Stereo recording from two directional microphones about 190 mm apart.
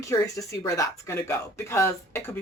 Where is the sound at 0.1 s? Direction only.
15° left (ahead or behind).